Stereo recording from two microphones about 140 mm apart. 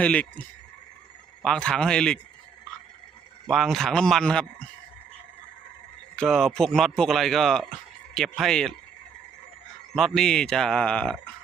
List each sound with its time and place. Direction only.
0.0 s speech: 10° left (ahead or behind)
1.5 s speech: 5° left (ahead or behind)
3.5 s speech: centre (ahead or behind)
6.1 s speech: centre (ahead or behind)
9.9 s speech: centre (ahead or behind)